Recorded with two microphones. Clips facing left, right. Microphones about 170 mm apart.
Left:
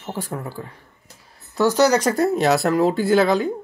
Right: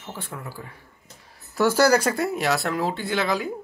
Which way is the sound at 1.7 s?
10° right (ahead or behind).